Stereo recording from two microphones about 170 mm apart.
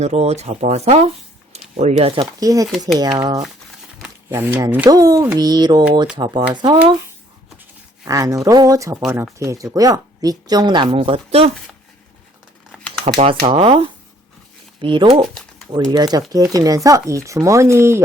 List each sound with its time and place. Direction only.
0.0 s speech: 40° right (ahead or behind)
2.4 s speech: 20° right (ahead or behind)
4.3 s speech: 15° right (ahead or behind)
8.0 s speech: 20° right (ahead or behind); by 11.5 s 35° right (ahead or behind)
13.1 s speech: 35° right (ahead or behind); by 18.0 s 15° right (ahead or behind)